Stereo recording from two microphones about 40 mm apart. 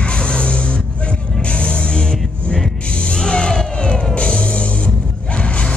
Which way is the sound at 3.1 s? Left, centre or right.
Left.